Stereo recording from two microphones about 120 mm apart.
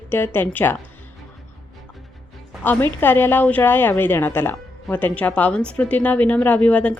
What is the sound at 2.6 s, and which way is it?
A woman's voice, 15° left (ahead or behind).